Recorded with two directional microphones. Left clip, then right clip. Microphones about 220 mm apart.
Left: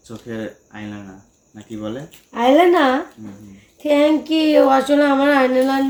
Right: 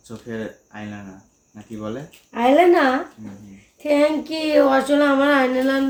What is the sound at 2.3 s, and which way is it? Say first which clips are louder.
Speech: left 1 dB; 5° right (ahead or behind).